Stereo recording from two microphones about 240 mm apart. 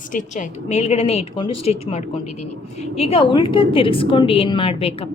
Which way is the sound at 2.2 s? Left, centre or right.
Left.